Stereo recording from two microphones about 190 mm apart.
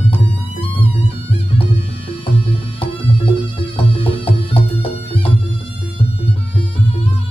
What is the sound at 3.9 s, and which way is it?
Music, 30° left (ahead or behind).